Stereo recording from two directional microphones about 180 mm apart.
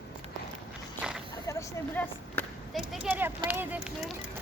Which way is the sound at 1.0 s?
5° right (ahead or behind).